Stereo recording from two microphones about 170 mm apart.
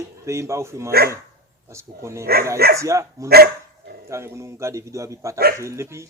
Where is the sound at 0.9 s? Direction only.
65° right (ahead or behind).